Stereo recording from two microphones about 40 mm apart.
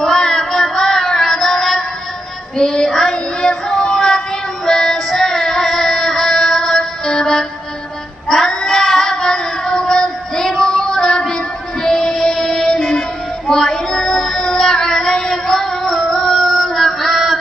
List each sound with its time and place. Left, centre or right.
0.0 s child singing: centre
0.5 s music: centre
2.5 s child singing: centre
4.6 s music: centre
8.3 s child singing: centre
13.5 s music: centre